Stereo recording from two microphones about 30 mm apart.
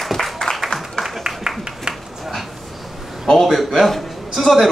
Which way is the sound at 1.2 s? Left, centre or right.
Right.